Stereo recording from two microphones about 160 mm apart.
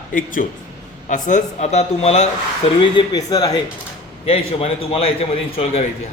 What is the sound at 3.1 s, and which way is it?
Speech, 25° left (ahead or behind).